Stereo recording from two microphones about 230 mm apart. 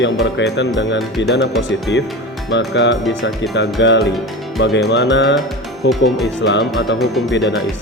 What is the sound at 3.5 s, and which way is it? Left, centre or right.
Music, left.